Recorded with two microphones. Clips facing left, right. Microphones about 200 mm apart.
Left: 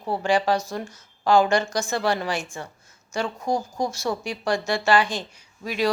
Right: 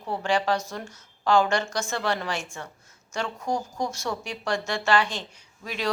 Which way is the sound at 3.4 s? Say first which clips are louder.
Left 3 dB; 35° left (ahead or behind).